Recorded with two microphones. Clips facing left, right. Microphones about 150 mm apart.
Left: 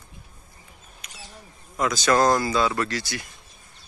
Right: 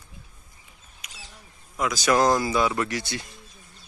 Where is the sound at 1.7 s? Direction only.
5° right (ahead or behind); by 3.3 s 25° right (ahead or behind).